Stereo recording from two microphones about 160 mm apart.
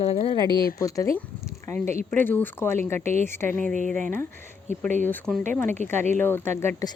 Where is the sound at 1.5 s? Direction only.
15° left (ahead or behind).